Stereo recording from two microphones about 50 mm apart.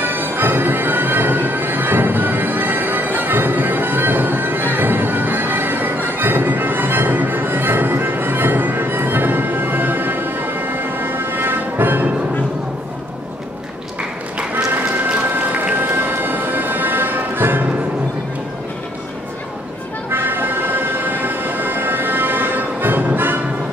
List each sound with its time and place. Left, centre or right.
0.0 s music: right
15.0 s music: right
15.9 s music: right
20.1 s music: right